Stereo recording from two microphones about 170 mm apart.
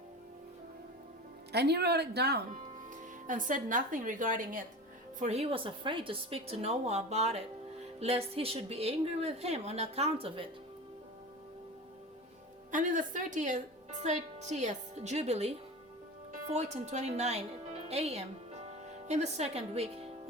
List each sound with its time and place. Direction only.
1.5 s speech: 75° right (ahead or behind)
2.9 s a woman's voice: 50° right (ahead or behind)
5.2 s a woman's voice: 40° right (ahead or behind)
12.7 s a woman's voice: 50° right (ahead or behind)
16.7 s a woman's voice: 40° right (ahead or behind)